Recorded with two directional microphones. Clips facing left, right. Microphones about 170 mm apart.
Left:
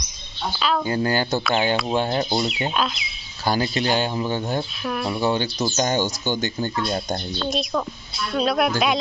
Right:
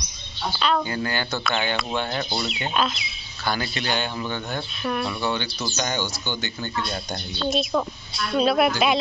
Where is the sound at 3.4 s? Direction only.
35° left (ahead or behind).